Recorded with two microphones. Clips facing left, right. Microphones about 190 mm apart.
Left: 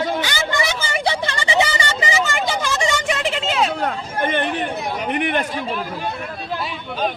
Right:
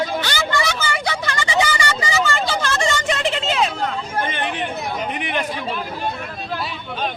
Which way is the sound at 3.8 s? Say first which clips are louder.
Left 1 dB; 55° left (ahead or behind).